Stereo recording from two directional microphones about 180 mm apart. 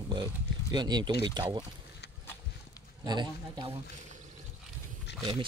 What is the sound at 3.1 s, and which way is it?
Speech, 25° right (ahead or behind).